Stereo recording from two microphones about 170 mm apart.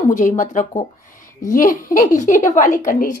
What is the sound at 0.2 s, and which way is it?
A woman's voice, 45° left (ahead or behind).